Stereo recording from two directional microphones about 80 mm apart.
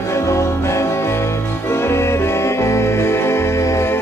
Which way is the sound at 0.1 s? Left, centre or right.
Left.